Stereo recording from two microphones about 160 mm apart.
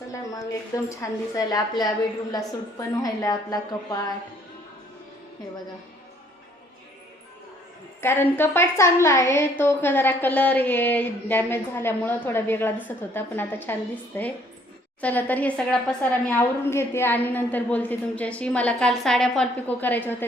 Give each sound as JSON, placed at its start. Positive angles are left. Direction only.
{"t": 0.9, "sound": "a woman's voice", "side_deg": 20}
{"t": 8.0, "sound": "a woman's voice", "side_deg": 15}